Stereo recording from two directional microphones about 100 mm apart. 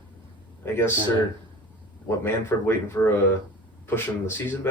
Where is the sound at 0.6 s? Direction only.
25° left (ahead or behind).